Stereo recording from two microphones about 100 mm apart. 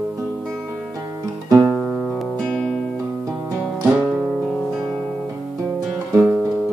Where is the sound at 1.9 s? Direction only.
5° right (ahead or behind).